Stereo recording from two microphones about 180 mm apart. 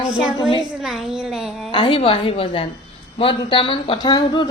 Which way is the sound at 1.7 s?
25° left (ahead or behind).